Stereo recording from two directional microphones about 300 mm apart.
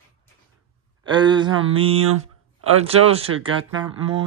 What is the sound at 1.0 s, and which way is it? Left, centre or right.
Speech, centre.